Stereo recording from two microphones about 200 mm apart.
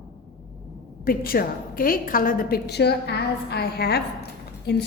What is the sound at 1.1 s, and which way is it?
A woman's voice, 45° left (ahead or behind).